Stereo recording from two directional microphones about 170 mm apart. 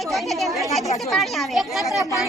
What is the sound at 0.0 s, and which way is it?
A woman's voice, centre (ahead or behind).